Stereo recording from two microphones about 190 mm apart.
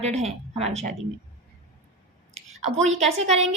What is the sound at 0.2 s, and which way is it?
Speech, 35° right (ahead or behind).